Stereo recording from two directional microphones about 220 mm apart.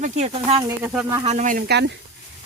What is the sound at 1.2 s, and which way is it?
Speech, 35° right (ahead or behind).